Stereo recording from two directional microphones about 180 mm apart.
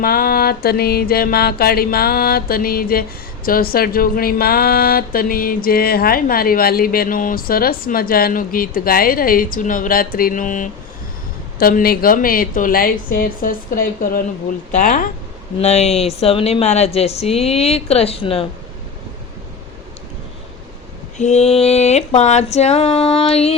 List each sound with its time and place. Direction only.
0.0 s music: 55° left (ahead or behind)
5.6 s speech: 55° left (ahead or behind)
15.5 s a woman's voice: 35° left (ahead or behind)
21.2 s a woman's voice: 40° left (ahead or behind)